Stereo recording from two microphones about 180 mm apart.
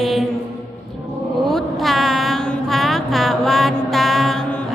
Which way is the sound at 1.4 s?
Centre (ahead or behind).